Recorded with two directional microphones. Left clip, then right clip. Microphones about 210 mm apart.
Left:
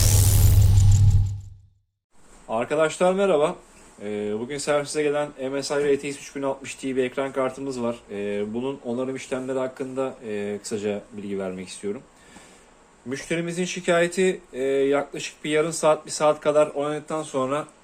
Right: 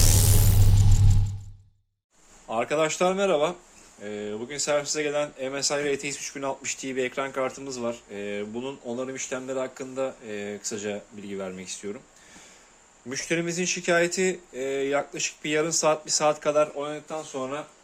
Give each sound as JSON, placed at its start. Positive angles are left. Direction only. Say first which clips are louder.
{"t": 0.0, "sound": "music", "louder": "even", "side_deg": 0}
{"t": 2.5, "sound": "speech", "louder": "left 2 dB", "side_deg": -20}
{"t": 4.0, "sound": "speech", "louder": "left 5 dB", "side_deg": 0}
{"t": 13.1, "sound": "speech", "louder": "even", "side_deg": -15}
{"t": 16.7, "sound": "speech", "louder": "left 5 dB", "side_deg": 15}